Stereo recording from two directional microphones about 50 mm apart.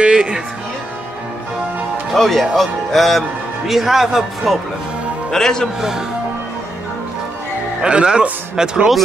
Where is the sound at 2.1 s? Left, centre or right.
Centre.